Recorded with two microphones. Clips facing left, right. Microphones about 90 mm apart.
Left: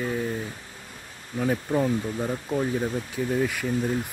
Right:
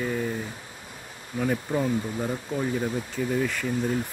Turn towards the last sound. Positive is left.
turn(degrees=10)  # may be behind; listen again after turning